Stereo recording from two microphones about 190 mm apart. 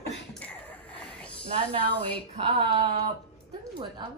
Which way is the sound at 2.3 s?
30° right (ahead or behind).